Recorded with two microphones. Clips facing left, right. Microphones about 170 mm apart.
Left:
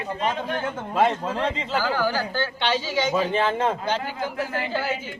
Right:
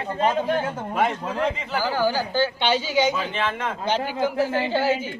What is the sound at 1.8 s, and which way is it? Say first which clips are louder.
Speech: right 2 dB; 15° right (ahead or behind).